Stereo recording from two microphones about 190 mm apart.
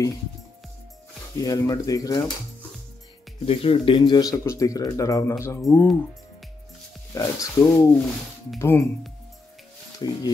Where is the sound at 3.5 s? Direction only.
30° left (ahead or behind).